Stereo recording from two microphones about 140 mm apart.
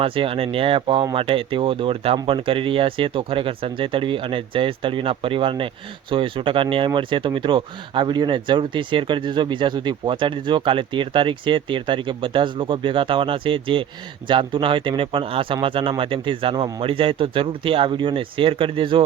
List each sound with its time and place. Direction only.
0.0 s speech: 40° right (ahead or behind)